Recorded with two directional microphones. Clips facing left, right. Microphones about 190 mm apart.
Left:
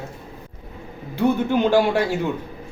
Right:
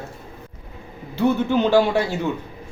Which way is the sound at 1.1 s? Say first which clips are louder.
Even; 15° left (ahead or behind).